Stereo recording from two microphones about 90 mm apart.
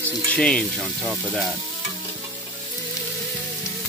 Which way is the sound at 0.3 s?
10° left (ahead or behind).